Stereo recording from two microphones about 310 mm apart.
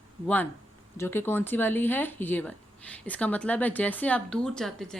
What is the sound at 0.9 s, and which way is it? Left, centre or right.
Speech, centre.